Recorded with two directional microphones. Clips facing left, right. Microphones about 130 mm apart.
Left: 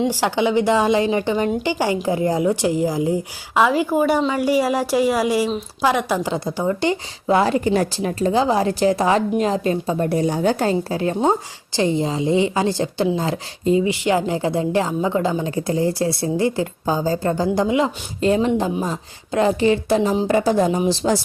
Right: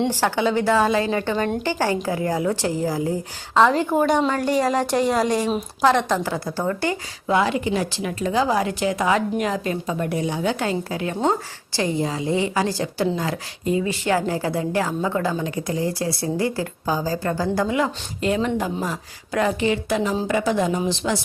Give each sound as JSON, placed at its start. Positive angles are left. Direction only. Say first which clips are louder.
{"t": 0.1, "sound": "a woman's voice", "louder": "left 2 dB", "side_deg": 15}
{"t": 7.3, "sound": "a woman's voice", "louder": "left 3 dB", "side_deg": 35}
{"t": 11.2, "sound": "a woman's voice", "louder": "left 3 dB", "side_deg": 20}